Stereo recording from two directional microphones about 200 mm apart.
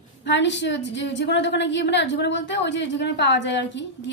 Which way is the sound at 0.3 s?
60° left (ahead or behind).